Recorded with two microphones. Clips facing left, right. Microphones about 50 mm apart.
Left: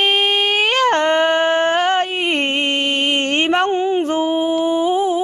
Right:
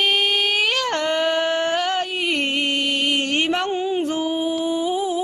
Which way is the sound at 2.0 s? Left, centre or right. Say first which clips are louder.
Left 4 dB; left.